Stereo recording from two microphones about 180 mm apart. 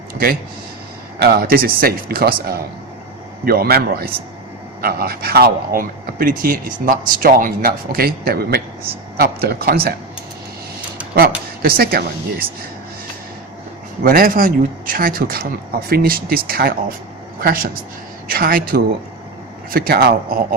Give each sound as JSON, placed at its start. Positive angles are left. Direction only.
{"t": 1.2, "sound": "speech", "side_deg": -60}
{"t": 11.6, "sound": "speech", "side_deg": -55}
{"t": 14.0, "sound": "speech", "side_deg": -50}